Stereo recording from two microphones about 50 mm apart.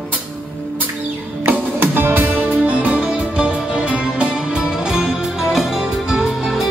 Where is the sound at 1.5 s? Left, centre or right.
Right.